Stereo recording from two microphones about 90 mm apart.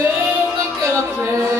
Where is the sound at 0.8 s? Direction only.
30° right (ahead or behind).